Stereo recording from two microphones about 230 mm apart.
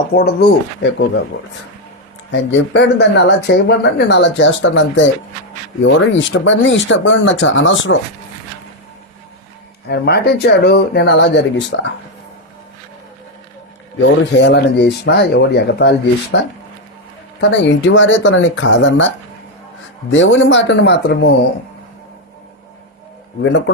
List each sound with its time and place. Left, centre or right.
0.1 s speech: left
2.3 s speech: left
9.9 s speech: left
14.3 s speech: left
17.5 s speech: left
23.4 s speech: left